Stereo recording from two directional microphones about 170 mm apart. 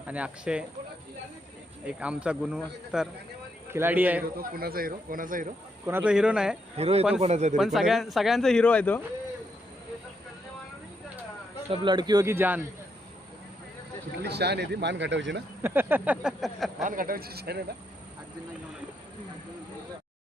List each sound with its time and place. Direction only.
0.1 s a man's voice: 5° right (ahead or behind)
1.8 s a man's voice: 5° right (ahead or behind)
4.4 s speech: 60° right (ahead or behind)
5.8 s speech: 10° right (ahead or behind)
6.7 s speech: 35° right (ahead or behind)
7.5 s speech: centre (ahead or behind)
11.7 s speech: 30° right (ahead or behind); by 12.6 s 10° right (ahead or behind)
14.3 s speech: 75° right (ahead or behind)
15.6 s a man's voice: 10° right (ahead or behind)
16.8 s speech: 55° right (ahead or behind); by 17.7 s 70° right (ahead or behind)